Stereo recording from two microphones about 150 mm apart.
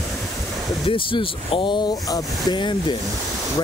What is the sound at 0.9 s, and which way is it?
Speech, 35° left (ahead or behind).